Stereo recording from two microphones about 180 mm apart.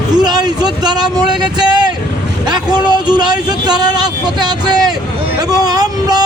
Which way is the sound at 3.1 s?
25° right (ahead or behind).